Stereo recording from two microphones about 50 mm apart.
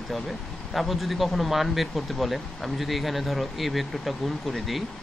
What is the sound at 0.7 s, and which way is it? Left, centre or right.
Speech, centre.